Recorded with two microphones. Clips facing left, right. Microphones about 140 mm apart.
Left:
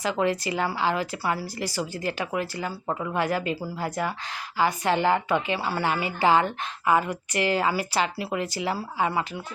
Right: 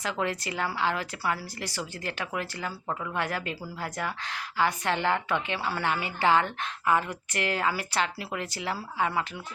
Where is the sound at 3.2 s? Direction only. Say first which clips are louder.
Left 8 dB; 5° left (ahead or behind).